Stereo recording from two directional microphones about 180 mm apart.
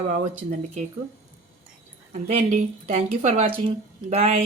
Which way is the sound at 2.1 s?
45° right (ahead or behind).